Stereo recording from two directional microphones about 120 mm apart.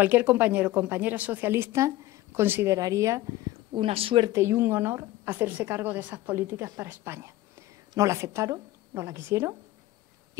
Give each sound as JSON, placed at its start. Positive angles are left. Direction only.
{"t": 0.0, "sound": "a woman's voice", "side_deg": -15}
{"t": 3.7, "sound": "speech", "side_deg": -50}
{"t": 4.3, "sound": "a woman's voice", "side_deg": -20}